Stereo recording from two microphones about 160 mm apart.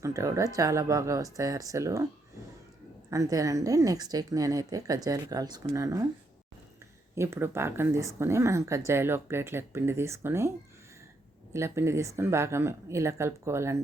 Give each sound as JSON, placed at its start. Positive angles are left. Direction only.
{"t": 0.0, "sound": "a woman's voice", "side_deg": -20}
{"t": 3.1, "sound": "a woman's voice", "side_deg": -20}
{"t": 7.2, "sound": "a woman's voice", "side_deg": -15}
{"t": 11.5, "sound": "a woman's voice", "side_deg": -15}